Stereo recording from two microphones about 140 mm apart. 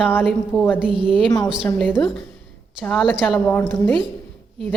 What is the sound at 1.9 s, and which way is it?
A woman's voice, centre (ahead or behind).